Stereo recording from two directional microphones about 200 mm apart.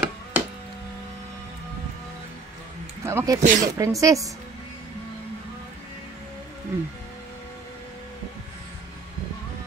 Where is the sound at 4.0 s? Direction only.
15° right (ahead or behind).